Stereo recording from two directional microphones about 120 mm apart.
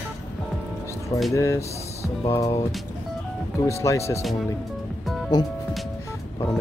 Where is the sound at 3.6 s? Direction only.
25° left (ahead or behind).